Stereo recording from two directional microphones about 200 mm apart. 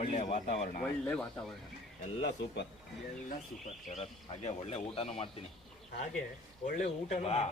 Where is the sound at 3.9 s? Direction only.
35° left (ahead or behind).